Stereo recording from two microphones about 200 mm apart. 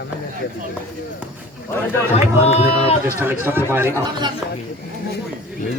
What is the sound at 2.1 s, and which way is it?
Speech, 30° left (ahead or behind).